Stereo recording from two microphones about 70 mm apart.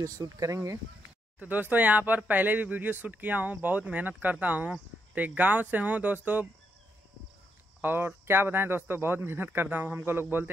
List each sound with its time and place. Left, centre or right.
0.0 s speech: right
1.4 s speech: right
7.8 s speech: right